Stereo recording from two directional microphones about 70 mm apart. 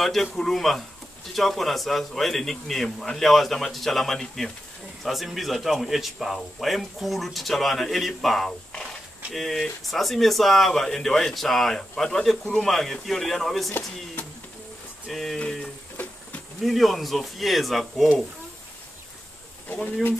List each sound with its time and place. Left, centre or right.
0.0 s speech: centre
15.0 s speech: centre
16.6 s speech: centre
19.7 s speech: left